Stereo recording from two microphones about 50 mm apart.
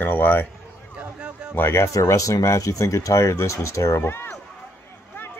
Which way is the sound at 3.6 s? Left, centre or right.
Left.